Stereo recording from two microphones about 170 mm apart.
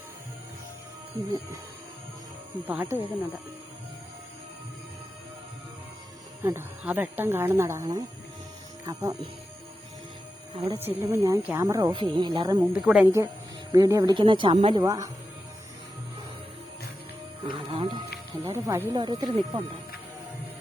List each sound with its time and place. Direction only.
2.6 s speech: 15° right (ahead or behind)
6.4 s speech: 15° right (ahead or behind)
10.5 s speech: 30° right (ahead or behind)
10.8 s speech: 15° right (ahead or behind)
12.7 s a woman's voice: 5° right (ahead or behind)
13.7 s speech: 20° right (ahead or behind)
17.4 s speech: 30° right (ahead or behind)
18.5 s speech: 15° right (ahead or behind)